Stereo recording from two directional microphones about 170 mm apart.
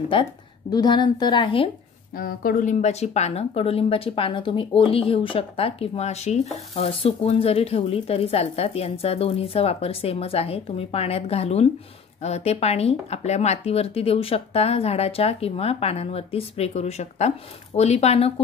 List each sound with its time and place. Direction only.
0.1 s a woman's voice: 30° left (ahead or behind)
2.1 s speech: 55° left (ahead or behind); by 18.3 s 40° left (ahead or behind)